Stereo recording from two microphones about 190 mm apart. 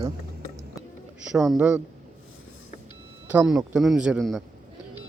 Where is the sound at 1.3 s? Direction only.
Centre (ahead or behind).